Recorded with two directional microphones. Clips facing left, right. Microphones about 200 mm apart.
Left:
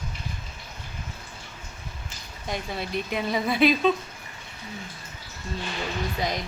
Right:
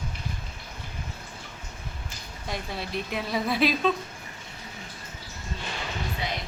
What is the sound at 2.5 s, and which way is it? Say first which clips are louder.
A woman's voice: left 3 dB; centre (ahead or behind).